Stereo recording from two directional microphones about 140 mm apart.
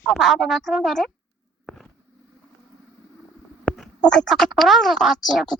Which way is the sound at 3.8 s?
5° left (ahead or behind).